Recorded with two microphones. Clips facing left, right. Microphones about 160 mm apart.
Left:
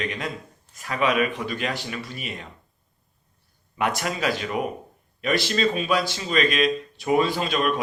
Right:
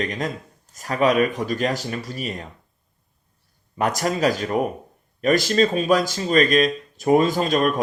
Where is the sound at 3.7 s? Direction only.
40° right (ahead or behind).